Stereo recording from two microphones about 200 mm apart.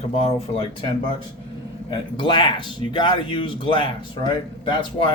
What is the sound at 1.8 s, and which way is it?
Speech, 25° left (ahead or behind).